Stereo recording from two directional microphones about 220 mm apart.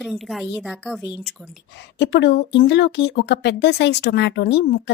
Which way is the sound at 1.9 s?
50° left (ahead or behind).